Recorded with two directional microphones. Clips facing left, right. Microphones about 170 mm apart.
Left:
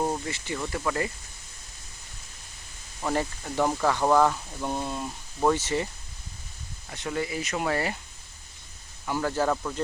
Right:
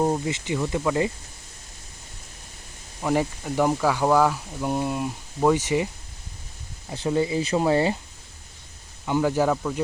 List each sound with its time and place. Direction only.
0.0 s speech: 20° right (ahead or behind)
3.0 s speech: 10° right (ahead or behind)
6.9 s speech: 30° right (ahead or behind)
9.0 s speech: 15° right (ahead or behind)